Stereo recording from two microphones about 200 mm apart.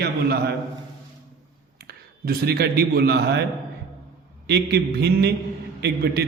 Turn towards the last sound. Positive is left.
turn(degrees=-55)  # may be behind; listen again after turning